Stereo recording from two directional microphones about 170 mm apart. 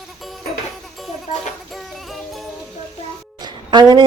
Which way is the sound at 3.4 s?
25° right (ahead or behind).